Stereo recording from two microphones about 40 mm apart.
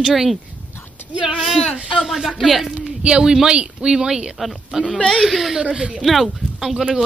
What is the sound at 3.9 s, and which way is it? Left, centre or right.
Speech, centre.